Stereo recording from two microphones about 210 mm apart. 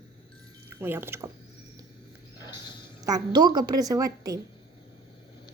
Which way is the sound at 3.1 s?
20° right (ahead or behind).